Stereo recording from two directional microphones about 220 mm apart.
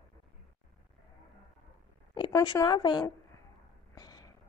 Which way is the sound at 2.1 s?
20° left (ahead or behind).